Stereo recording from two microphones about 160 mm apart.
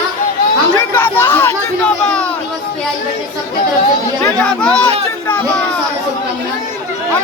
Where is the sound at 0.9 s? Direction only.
10° left (ahead or behind).